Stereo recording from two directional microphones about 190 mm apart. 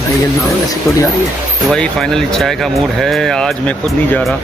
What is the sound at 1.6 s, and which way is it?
Speech, 5° left (ahead or behind).